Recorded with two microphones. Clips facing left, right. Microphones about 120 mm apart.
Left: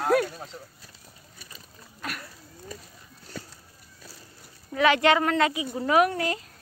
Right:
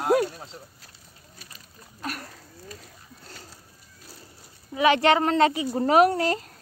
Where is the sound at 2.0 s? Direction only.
35° right (ahead or behind).